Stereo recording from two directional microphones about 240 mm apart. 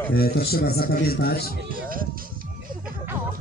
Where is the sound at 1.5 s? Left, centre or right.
Right.